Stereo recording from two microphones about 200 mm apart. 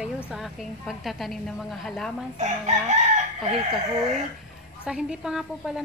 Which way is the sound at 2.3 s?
35° right (ahead or behind).